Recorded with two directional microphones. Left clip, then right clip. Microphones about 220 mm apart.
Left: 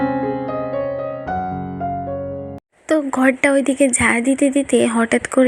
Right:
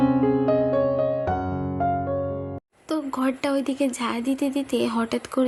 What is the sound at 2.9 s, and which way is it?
A woman's voice, 15° left (ahead or behind).